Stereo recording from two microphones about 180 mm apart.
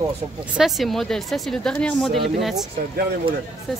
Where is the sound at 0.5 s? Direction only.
Centre (ahead or behind).